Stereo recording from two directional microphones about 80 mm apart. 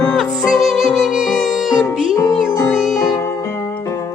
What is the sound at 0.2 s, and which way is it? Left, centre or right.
Music, centre.